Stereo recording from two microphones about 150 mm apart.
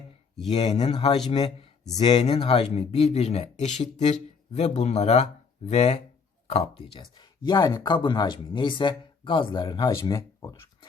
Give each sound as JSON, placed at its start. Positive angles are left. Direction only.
{"t": 0.5, "sound": "speech", "side_deg": 45}
{"t": 0.9, "sound": "speech", "side_deg": 35}